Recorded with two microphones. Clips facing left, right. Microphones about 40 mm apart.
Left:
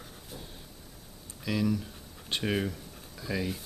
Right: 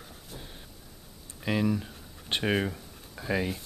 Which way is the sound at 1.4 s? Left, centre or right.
Right.